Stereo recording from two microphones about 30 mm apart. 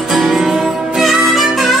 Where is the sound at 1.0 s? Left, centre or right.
Centre.